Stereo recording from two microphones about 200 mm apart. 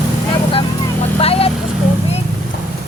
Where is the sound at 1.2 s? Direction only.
30° left (ahead or behind).